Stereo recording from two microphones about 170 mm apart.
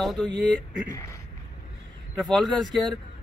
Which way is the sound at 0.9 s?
20° left (ahead or behind).